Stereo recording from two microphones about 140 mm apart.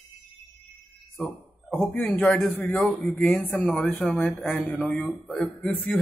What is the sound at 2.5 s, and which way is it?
Speech, 10° left (ahead or behind).